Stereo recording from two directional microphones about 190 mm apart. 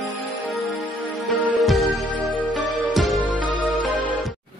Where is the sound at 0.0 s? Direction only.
Centre (ahead or behind).